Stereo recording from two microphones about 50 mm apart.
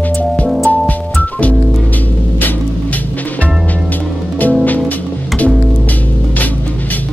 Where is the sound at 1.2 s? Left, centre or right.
Left.